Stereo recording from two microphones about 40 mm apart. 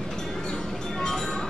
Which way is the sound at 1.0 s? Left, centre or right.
Centre.